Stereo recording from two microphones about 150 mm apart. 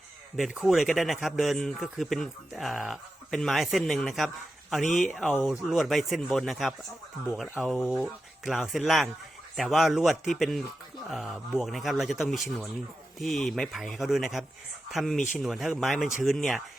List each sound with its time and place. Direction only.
0.3 s a man's voice: centre (ahead or behind)